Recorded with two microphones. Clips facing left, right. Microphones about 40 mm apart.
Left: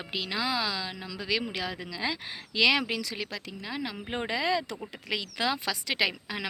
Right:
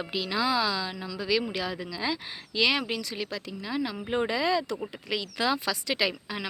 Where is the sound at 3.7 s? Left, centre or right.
Left.